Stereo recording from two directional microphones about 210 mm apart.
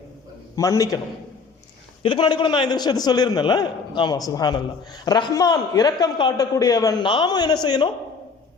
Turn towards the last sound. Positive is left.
turn(degrees=20)  # may be behind; listen again after turning